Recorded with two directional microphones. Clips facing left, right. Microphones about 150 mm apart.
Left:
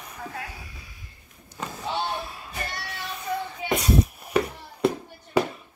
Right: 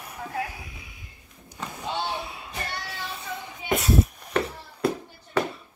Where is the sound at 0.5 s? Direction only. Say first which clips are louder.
Right 1 dB; 15° right (ahead or behind).